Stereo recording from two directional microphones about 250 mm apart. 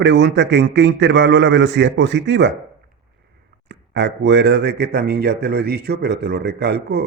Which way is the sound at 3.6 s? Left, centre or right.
Right.